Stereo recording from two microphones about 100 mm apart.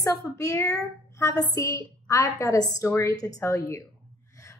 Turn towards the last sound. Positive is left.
turn(degrees=30)  # may be behind; listen again after turning